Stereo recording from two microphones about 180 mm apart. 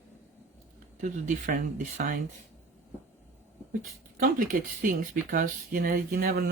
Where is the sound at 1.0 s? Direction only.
45° right (ahead or behind).